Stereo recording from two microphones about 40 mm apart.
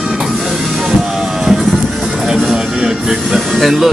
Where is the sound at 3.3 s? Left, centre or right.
Centre.